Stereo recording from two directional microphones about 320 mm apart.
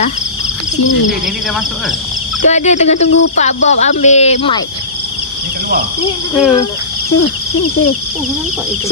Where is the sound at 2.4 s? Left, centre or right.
Left.